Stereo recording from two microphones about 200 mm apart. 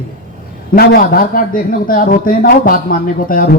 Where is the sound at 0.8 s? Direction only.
50° left (ahead or behind).